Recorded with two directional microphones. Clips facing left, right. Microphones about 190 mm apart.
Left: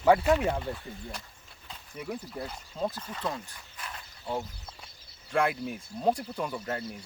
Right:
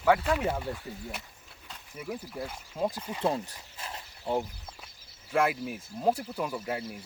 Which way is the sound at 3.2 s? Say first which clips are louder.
Right 6 dB; 30° right (ahead or behind).